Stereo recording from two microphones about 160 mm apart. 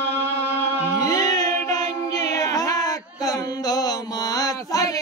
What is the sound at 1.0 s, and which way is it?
Music, 20° left (ahead or behind).